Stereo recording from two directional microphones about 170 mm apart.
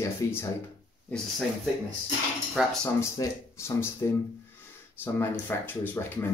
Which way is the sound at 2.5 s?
5° left (ahead or behind).